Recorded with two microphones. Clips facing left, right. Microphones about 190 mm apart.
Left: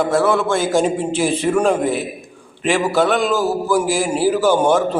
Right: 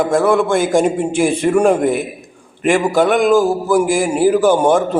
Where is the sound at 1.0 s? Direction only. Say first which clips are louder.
Right 3 dB; 55° right (ahead or behind).